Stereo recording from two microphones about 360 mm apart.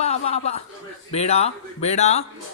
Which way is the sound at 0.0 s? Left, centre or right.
Centre.